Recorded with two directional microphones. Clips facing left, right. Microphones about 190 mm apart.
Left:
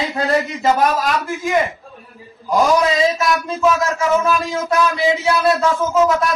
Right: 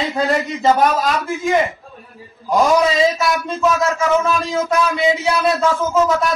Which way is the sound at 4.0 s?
20° right (ahead or behind).